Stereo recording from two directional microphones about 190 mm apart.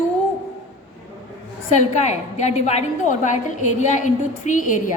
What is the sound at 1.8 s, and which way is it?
A woman's voice, 35° left (ahead or behind).